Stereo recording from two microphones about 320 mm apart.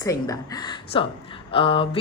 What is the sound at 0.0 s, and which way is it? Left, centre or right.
Speech, centre.